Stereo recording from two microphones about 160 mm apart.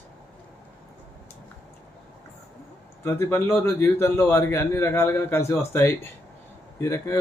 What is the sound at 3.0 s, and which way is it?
A man's voice, 15° left (ahead or behind).